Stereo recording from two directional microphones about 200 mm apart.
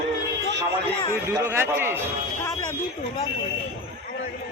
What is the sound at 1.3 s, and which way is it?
Speech, 15° right (ahead or behind).